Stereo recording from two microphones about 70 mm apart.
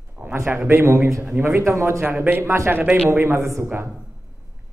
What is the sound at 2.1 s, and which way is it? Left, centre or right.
Speech, right.